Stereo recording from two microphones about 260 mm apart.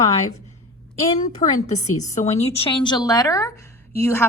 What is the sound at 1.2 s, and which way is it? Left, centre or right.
A woman's voice, left.